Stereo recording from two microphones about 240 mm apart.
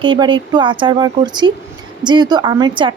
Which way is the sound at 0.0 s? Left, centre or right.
Centre.